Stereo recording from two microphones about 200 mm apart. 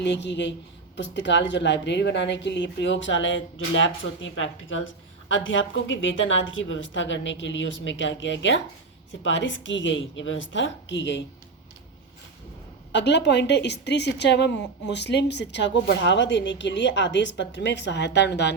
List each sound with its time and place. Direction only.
0.0 s a woman's voice: 60° left (ahead or behind)
12.9 s a woman's voice: 60° left (ahead or behind)